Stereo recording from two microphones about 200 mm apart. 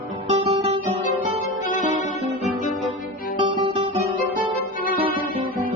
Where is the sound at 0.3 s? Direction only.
30° right (ahead or behind).